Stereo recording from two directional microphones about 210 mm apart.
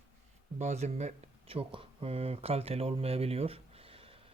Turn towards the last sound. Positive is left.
turn(degrees=-25)  # may be behind; listen again after turning